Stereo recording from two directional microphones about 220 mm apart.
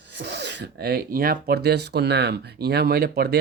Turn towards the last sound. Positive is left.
turn(degrees=-45)  # may be behind; listen again after turning